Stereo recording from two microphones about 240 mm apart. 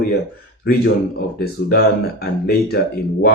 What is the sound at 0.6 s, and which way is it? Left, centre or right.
Speech, left.